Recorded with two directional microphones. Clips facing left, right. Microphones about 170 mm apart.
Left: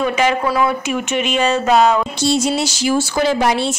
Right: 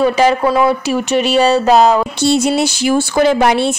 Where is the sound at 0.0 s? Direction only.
35° right (ahead or behind).